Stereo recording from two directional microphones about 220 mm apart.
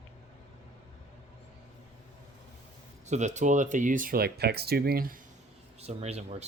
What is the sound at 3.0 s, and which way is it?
Speech, 30° right (ahead or behind).